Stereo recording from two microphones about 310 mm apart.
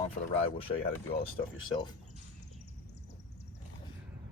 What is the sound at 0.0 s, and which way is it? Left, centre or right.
Speech, centre.